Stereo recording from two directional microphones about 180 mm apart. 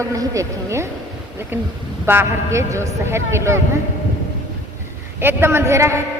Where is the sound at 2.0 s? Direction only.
10° right (ahead or behind).